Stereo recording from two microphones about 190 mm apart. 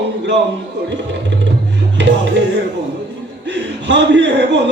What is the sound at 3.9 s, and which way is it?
Speech, 65° right (ahead or behind).